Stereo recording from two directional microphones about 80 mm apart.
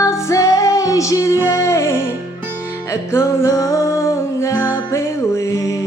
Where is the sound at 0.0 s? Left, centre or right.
Left.